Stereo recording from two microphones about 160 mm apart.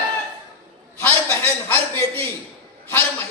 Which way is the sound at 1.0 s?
15° left (ahead or behind).